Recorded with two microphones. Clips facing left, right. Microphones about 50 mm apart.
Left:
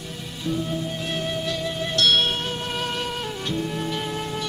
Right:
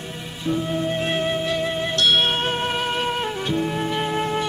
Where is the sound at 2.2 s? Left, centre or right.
Right.